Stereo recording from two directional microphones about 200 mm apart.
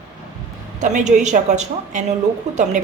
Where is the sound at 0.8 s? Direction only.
35° right (ahead or behind).